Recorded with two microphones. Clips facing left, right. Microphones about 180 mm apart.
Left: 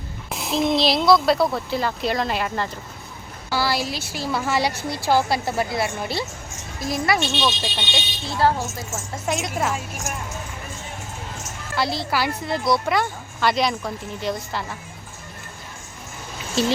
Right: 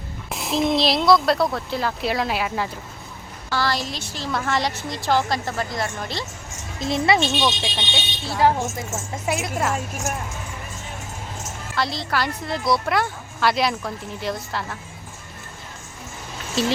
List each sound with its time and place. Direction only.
0.3 s a woman's voice: centre (ahead or behind)
3.5 s a woman's voice: 10° left (ahead or behind)
6.7 s speech: 25° right (ahead or behind)
7.6 s a woman's voice: 5° right (ahead or behind)
11.8 s a woman's voice: 5° left (ahead or behind)
16.6 s a woman's voice: centre (ahead or behind)